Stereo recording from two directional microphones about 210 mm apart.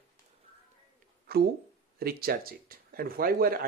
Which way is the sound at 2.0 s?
45° right (ahead or behind).